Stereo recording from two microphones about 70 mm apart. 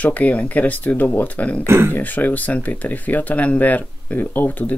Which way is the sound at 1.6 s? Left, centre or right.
Right.